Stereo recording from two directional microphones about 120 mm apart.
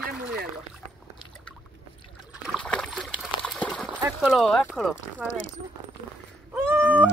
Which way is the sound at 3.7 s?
Centre (ahead or behind).